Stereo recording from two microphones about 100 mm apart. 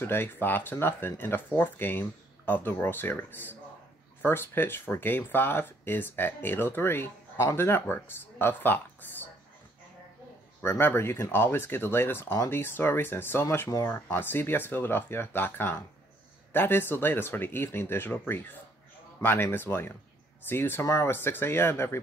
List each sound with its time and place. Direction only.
0.0 s speech: 25° left (ahead or behind)
10.6 s speech: 25° left (ahead or behind)